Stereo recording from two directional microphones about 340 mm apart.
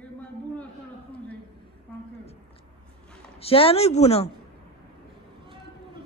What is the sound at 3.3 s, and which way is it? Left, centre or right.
Speech, centre.